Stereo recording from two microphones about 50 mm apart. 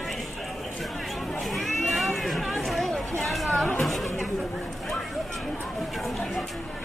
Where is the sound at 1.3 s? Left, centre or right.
Centre.